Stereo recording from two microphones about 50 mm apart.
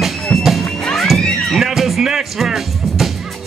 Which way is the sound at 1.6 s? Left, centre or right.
Centre.